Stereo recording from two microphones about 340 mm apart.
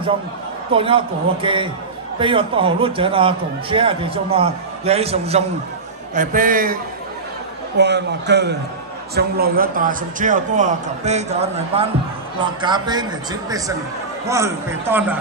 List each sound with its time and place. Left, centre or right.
0.7 s a man's voice: centre